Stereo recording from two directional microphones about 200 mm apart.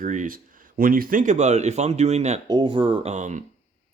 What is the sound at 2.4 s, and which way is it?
Speech, 20° right (ahead or behind).